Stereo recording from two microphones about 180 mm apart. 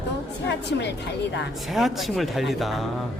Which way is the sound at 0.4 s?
70° left (ahead or behind).